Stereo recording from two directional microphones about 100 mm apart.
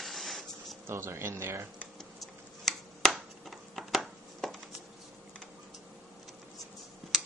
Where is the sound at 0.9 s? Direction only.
25° right (ahead or behind).